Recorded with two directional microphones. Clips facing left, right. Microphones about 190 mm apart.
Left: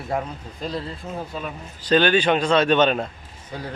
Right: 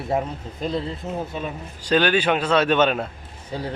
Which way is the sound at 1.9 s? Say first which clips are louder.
Left 1 dB; 10° right (ahead or behind).